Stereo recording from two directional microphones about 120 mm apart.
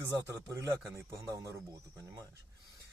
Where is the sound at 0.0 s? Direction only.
25° right (ahead or behind).